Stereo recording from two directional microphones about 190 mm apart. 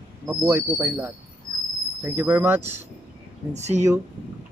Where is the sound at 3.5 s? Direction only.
35° right (ahead or behind).